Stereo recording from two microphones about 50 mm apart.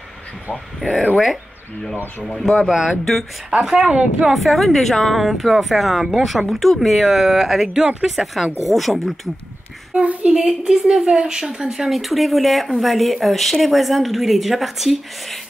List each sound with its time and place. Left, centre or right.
0.7 s speech: centre
2.2 s speech: centre
2.7 s speech: centre
4.3 s speech: centre
8.6 s speech: centre
9.9 s a woman's voice: right; by 15.3 s centre